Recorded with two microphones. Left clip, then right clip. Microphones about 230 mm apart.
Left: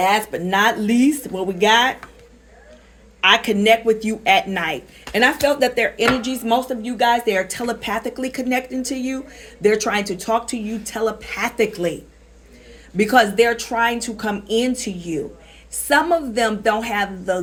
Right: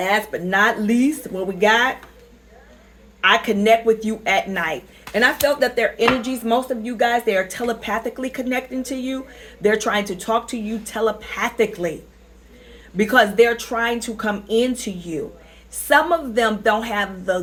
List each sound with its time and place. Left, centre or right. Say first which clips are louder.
0.0 s speech: left 2 dB; left
3.2 s speech: left 1 dB; left
13.0 s speech: even; left
16.5 s speech: even; left